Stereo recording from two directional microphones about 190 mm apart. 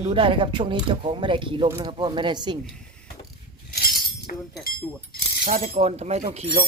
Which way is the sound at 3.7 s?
55° left (ahead or behind).